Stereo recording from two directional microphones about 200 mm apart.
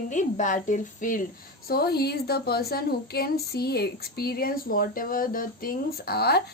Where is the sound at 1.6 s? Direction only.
50° left (ahead or behind).